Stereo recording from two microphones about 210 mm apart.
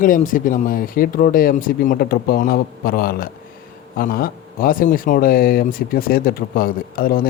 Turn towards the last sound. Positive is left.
turn(degrees=45)  # may be behind; listen again after turning